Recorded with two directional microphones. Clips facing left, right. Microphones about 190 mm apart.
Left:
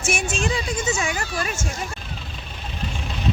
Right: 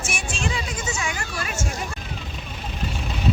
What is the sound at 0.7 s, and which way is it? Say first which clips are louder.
Speech: left 5 dB; 25° left (ahead or behind).